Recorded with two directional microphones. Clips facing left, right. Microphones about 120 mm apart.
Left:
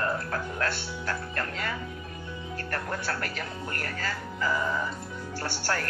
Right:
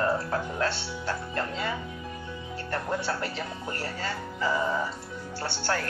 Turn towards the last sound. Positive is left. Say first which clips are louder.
# right 1 dB
turn(degrees=-20)  # may be behind; listen again after turning